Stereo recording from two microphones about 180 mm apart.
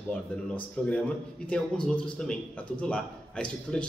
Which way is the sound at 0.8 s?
5° left (ahead or behind).